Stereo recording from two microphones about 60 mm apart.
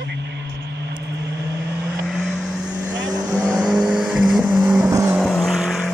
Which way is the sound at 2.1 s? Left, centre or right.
Centre.